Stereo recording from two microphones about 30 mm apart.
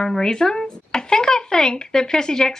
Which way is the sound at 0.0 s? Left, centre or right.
Centre.